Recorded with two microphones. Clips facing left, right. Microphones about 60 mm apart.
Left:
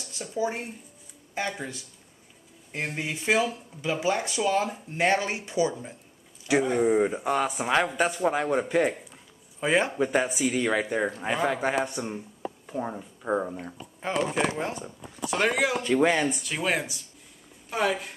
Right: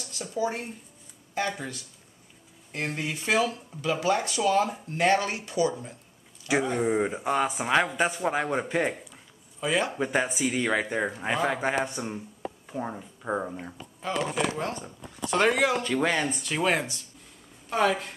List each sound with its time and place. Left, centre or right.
0.4 s speech: centre
2.7 s speech: centre
6.5 s speech: centre
9.6 s speech: left
9.9 s speech: centre
14.0 s speech: left
15.2 s speech: centre